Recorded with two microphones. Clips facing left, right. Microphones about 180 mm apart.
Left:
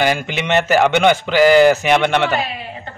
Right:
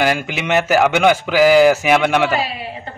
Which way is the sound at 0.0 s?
5° right (ahead or behind).